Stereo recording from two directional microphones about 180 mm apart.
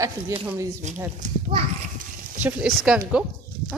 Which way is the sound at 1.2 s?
45° right (ahead or behind).